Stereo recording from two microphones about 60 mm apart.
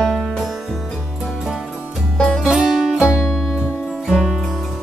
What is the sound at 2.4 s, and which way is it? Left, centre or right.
Music, centre.